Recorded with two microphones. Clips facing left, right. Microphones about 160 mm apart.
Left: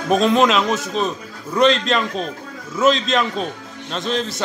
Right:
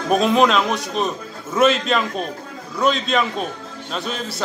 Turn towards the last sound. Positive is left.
turn(degrees=-5)  # may be behind; listen again after turning